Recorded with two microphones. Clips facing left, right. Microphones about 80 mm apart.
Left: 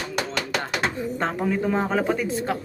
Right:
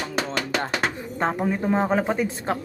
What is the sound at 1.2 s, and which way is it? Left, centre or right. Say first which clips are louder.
Speech: right 2 dB; centre.